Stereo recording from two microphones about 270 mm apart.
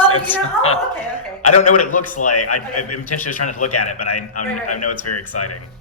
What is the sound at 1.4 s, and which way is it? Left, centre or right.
A man's voice, left.